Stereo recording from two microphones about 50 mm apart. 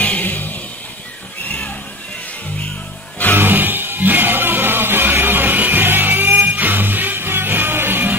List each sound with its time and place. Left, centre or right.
0.0 s music: left
3.3 s music: right